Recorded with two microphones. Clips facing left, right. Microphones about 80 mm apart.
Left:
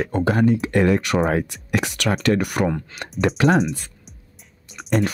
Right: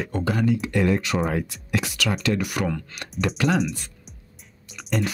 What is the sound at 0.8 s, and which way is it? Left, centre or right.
Speech, left.